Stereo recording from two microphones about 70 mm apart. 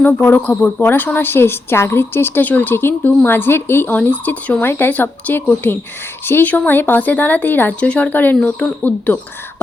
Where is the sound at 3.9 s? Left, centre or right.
Left.